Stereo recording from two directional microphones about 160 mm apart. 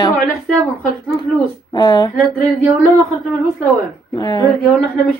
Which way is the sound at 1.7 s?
25° left (ahead or behind).